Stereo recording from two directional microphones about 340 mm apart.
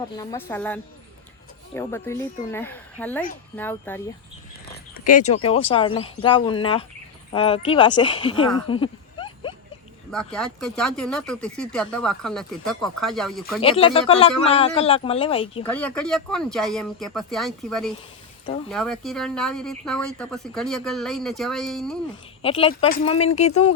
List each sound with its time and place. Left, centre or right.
0.2 s speech: centre
5.0 s speech: left
8.6 s a sound: centre
10.1 s speech: centre
13.6 s speech: centre
15.6 s speech: centre
22.4 s speech: centre